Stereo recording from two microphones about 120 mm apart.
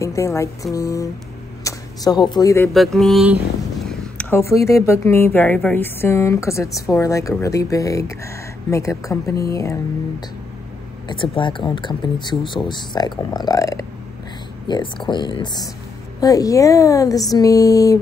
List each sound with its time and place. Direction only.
0.0 s speech: 25° left (ahead or behind)
1.6 s a sound: 25° left (ahead or behind)
2.1 s speech: 40° left (ahead or behind)
2.7 s mantra: centre (ahead or behind)
4.2 s speech: 20° left (ahead or behind)
11.1 s speech: 45° left (ahead or behind); by 13.8 s 30° left (ahead or behind)
14.7 s speech: 40° left (ahead or behind)